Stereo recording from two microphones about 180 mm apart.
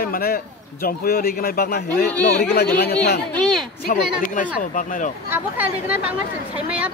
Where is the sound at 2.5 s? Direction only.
60° left (ahead or behind); by 5.1 s 45° left (ahead or behind).